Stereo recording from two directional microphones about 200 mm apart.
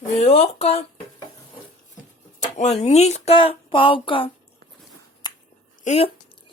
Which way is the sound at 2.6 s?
35° left (ahead or behind).